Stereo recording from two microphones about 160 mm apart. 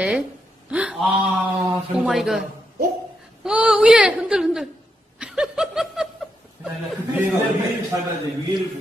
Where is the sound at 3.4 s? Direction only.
5° right (ahead or behind).